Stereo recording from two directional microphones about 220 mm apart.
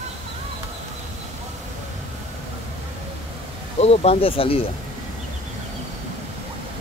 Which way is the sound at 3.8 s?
30° left (ahead or behind).